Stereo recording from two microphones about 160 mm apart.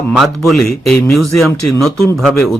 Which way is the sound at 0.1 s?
Centre (ahead or behind).